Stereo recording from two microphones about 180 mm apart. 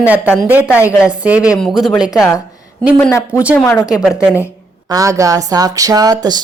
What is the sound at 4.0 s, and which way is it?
Speech, 5° right (ahead or behind).